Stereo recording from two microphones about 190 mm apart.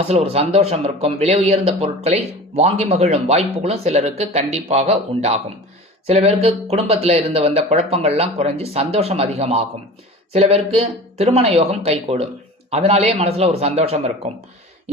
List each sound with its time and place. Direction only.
0.1 s speech: 35° right (ahead or behind)